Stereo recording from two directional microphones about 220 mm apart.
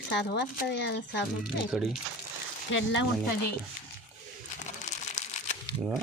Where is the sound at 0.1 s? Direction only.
50° left (ahead or behind).